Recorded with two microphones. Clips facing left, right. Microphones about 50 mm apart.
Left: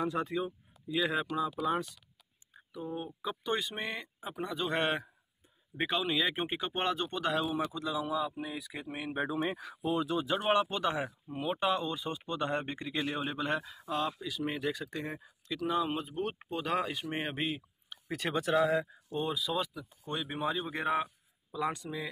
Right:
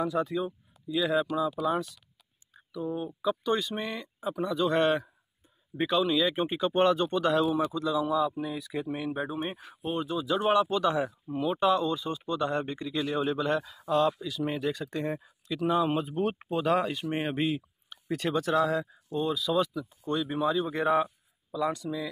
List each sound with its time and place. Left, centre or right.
0.0 s speech: left
2.5 s a sound: left
3.3 s speech: left
6.7 s speech: centre
9.9 s speech: left
10.5 s speech: left
13.7 s speech: centre
16.7 s speech: centre
18.4 s speech: centre
19.5 s speech: centre
20.6 s a sound: centre
21.5 s speech: left